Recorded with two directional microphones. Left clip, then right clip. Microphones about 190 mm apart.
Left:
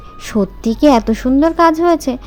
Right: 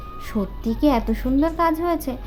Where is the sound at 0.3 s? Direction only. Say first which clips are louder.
Left 10 dB; 35° left (ahead or behind).